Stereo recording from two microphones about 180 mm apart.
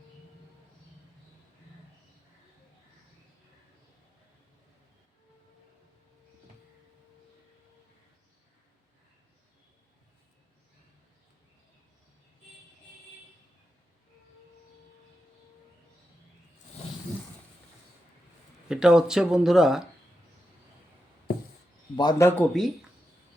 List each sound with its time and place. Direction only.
18.7 s speech: 5° right (ahead or behind)
21.9 s a man's voice: 25° left (ahead or behind)
22.3 s speech: 5° left (ahead or behind)